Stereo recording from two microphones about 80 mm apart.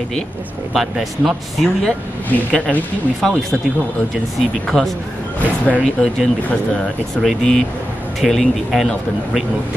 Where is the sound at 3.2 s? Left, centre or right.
Centre.